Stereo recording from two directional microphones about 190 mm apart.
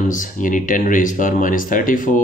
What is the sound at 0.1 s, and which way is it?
Speech, 45° left (ahead or behind).